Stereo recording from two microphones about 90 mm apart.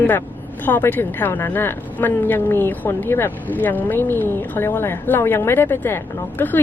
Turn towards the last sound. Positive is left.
turn(degrees=25)  # may be behind; listen again after turning